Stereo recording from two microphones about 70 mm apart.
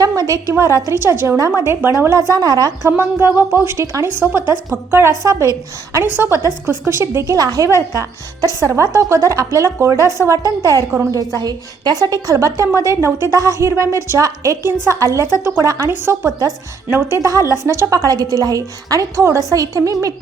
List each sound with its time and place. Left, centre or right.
0.0 s a woman's voice: right
0.6 s a woman's voice: right
2.1 s a woman's voice: right
3.0 s a woman's voice: right
5.3 s a woman's voice: right
6.0 s a woman's voice: right
7.3 s a woman's voice: right
8.6 s a woman's voice: right
11.3 s a woman's voice: right
12.4 s a woman's voice: right
15.9 s a woman's voice: right
17.2 s a woman's voice: right
17.9 s a woman's voice: right